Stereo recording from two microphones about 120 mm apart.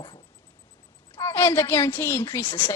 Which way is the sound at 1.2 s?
20° left (ahead or behind).